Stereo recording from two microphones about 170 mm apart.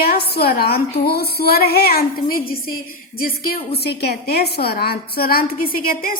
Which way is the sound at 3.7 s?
70° left (ahead or behind).